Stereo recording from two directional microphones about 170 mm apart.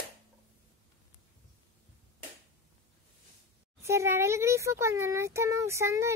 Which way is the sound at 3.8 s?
15° right (ahead or behind).